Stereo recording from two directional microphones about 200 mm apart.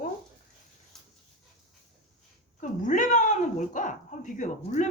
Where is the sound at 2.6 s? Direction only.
40° left (ahead or behind).